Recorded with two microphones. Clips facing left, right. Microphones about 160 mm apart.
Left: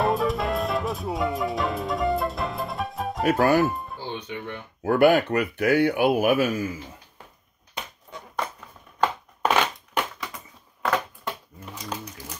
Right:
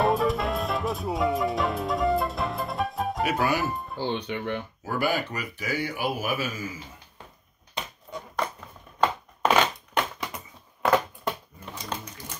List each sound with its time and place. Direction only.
0.0 s music: centre (ahead or behind)
3.3 s speech: 45° left (ahead or behind)
4.0 s speech: 75° right (ahead or behind)
4.8 s speech: 60° left (ahead or behind)
9.4 s crushing: 5° left (ahead or behind)
10.3 s a sound: 20° right (ahead or behind)
11.6 s a sound: 10° left (ahead or behind)